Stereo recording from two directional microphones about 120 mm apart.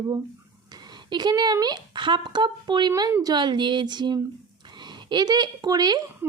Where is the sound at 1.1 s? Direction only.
35° right (ahead or behind).